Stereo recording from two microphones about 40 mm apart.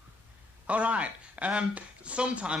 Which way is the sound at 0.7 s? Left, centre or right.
Right.